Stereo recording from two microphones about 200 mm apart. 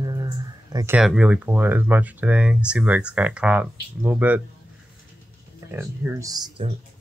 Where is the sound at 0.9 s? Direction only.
5° right (ahead or behind).